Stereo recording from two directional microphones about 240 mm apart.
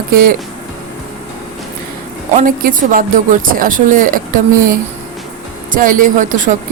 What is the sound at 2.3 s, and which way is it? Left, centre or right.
A woman's voice, right.